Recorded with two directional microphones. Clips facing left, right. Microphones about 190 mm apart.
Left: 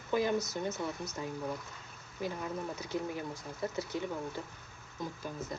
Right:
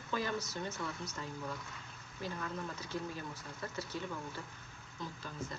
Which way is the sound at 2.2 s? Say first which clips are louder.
Left 4 dB; 15° left (ahead or behind).